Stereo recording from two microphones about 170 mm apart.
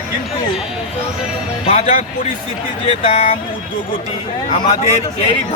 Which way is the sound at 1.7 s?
40° left (ahead or behind).